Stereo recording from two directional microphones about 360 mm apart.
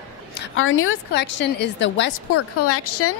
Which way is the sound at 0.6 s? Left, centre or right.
Left.